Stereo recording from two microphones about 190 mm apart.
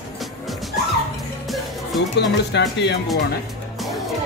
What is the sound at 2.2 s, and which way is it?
Speech, 65° left (ahead or behind).